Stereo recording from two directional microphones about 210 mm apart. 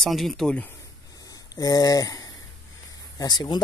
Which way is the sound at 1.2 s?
15° left (ahead or behind).